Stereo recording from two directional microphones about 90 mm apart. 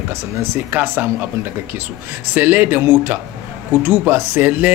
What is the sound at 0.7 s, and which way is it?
Speech, 20° right (ahead or behind).